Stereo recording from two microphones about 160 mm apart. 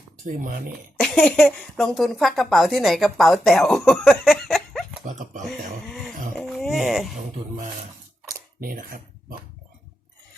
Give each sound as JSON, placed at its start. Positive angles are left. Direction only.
{"t": 0.3, "sound": "speech", "side_deg": -55}
{"t": 0.9, "sound": "speech", "side_deg": 5}
{"t": 5.8, "sound": "a sound", "side_deg": 5}
{"t": 8.6, "sound": "speech", "side_deg": -65}